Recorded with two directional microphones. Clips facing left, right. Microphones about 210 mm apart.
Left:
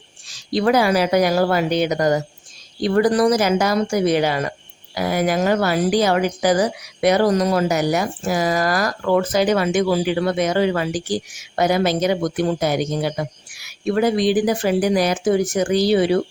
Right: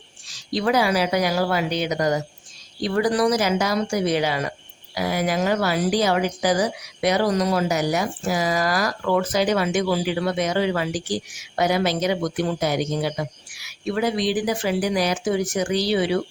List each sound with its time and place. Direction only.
0.5 s speech: 55° left (ahead or behind)